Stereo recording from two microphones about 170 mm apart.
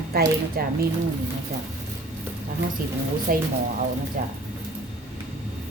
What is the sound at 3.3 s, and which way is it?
Speech, 55° right (ahead or behind).